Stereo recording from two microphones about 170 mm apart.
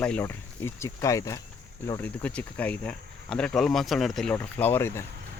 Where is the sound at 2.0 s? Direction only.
10° left (ahead or behind).